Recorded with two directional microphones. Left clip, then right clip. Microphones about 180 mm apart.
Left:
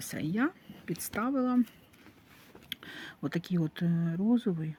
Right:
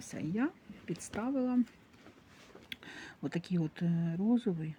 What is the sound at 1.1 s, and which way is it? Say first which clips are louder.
Speech: left 4 dB; 35° left (ahead or behind).